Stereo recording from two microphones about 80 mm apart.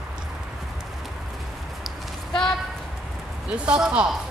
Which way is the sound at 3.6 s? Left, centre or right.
Centre.